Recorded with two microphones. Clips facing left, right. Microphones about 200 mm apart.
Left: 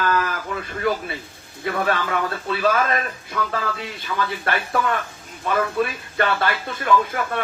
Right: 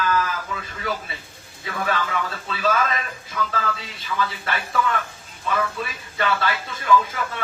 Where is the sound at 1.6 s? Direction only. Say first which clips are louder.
Left 3 dB; 60° left (ahead or behind).